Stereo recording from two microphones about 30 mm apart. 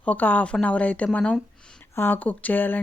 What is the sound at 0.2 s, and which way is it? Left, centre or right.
Speech, left.